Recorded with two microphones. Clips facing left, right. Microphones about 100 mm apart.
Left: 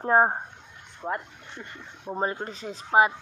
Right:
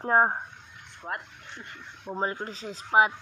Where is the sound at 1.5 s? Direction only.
5° left (ahead or behind).